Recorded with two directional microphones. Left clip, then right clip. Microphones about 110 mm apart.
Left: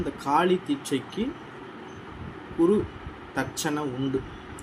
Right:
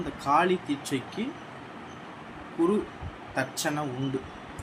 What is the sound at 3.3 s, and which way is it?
Speech, 15° left (ahead or behind).